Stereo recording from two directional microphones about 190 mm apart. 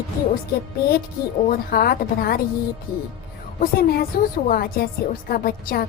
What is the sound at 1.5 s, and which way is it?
A woman's voice, 50° left (ahead or behind).